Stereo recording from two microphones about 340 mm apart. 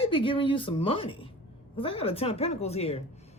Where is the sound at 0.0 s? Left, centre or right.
Centre.